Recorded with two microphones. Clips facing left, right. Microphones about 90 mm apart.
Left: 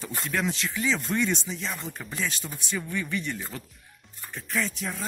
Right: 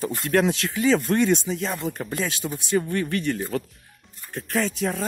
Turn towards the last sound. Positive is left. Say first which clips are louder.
# right 6 dB
turn(degrees=-85)